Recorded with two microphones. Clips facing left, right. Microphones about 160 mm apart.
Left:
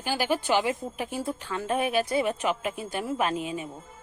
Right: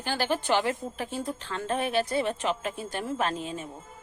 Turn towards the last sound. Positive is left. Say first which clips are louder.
# left 2 dB
turn(degrees=10)  # may be behind; listen again after turning